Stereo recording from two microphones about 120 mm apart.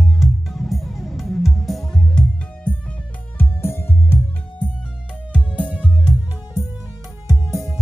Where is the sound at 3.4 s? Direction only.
20° left (ahead or behind).